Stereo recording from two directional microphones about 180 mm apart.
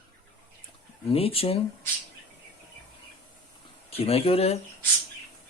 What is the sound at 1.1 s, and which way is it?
Speech, 30° left (ahead or behind).